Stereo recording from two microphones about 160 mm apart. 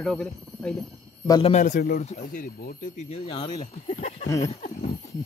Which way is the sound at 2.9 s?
45° left (ahead or behind).